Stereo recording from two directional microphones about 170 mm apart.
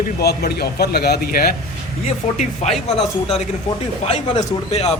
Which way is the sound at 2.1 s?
45° left (ahead or behind).